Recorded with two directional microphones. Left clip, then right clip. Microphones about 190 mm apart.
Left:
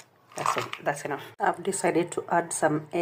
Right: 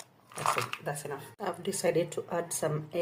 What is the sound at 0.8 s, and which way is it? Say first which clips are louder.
Speech: left 8 dB; 20° left (ahead or behind).